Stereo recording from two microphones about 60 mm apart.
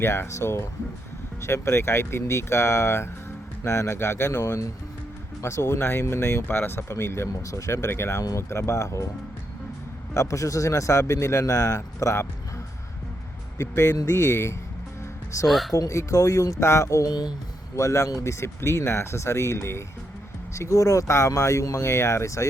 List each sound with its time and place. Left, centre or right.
0.0 s speech: left
10.2 s speech: left
13.6 s speech: left
15.4 s speech: centre
15.7 s speech: left
21.8 s speech: left